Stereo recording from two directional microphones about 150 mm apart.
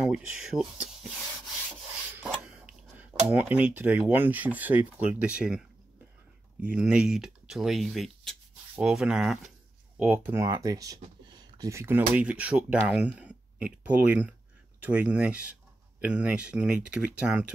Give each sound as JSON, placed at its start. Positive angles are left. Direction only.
{"t": 0.0, "sound": "speech", "side_deg": -5}
{"t": 2.1, "sound": "a sound", "side_deg": -5}
{"t": 3.3, "sound": "speech", "side_deg": -10}
{"t": 10.4, "sound": "speech", "side_deg": -20}